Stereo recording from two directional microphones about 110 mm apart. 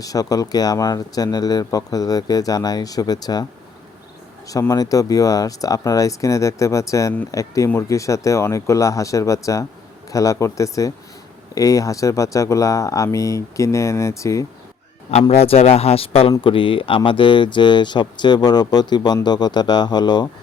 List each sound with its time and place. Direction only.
0.0 s speech: 35° left (ahead or behind)
4.7 s speech: 30° left (ahead or behind)
15.3 s speech: 75° left (ahead or behind); by 20.2 s 40° left (ahead or behind)